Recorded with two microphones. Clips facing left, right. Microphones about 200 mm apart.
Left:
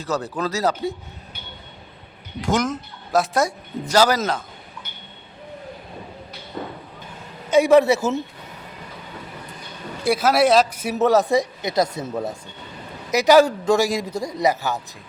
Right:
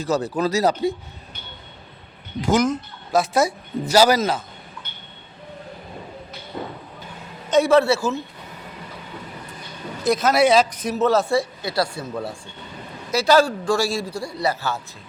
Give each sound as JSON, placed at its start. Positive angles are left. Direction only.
{"t": 0.0, "sound": "speech", "side_deg": -10}
{"t": 2.4, "sound": "speech", "side_deg": 0}
{"t": 7.5, "sound": "speech", "side_deg": 15}
{"t": 10.0, "sound": "speech", "side_deg": 10}